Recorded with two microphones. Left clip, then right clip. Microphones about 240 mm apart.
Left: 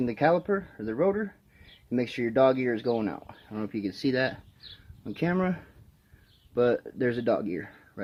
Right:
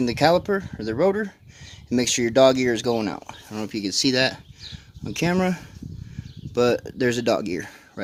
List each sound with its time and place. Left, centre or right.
0.0 s speech: right